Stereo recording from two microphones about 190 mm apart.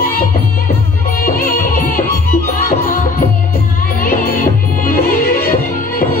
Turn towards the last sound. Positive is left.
turn(degrees=50)  # may be behind; listen again after turning